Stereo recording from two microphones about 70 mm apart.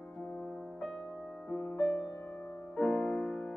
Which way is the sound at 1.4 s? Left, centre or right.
Centre.